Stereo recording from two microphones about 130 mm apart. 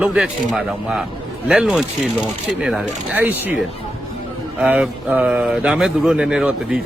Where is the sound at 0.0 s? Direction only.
5° right (ahead or behind).